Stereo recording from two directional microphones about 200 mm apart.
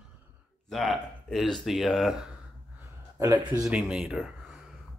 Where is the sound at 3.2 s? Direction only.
10° right (ahead or behind).